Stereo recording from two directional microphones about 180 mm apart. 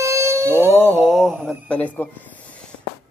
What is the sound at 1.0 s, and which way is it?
Speech, centre (ahead or behind).